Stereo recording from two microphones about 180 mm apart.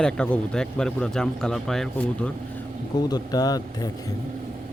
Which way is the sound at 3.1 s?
20° left (ahead or behind).